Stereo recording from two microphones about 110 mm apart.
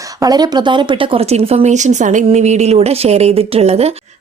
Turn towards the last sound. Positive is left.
turn(degrees=-70)  # may be behind; listen again after turning